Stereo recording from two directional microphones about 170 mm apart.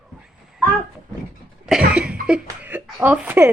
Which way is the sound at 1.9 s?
5° right (ahead or behind).